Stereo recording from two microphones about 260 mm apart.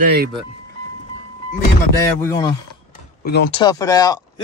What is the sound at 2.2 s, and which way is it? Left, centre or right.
Speech, centre.